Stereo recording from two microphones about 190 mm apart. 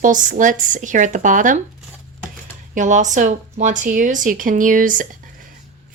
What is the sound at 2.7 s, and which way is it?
A woman's voice, 40° right (ahead or behind).